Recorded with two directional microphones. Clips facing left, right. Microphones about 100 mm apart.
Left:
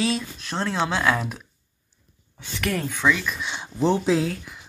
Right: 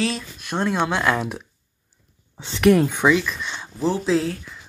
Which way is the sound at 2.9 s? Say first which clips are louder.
Right 4 dB; 15° right (ahead or behind).